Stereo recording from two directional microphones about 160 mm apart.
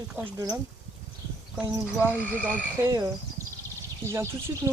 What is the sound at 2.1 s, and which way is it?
Speech, 15° right (ahead or behind).